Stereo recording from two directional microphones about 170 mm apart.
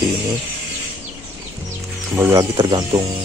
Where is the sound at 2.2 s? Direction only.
20° right (ahead or behind).